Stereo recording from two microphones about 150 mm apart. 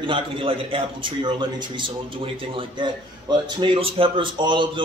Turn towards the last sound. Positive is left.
turn(degrees=-35)  # may be behind; listen again after turning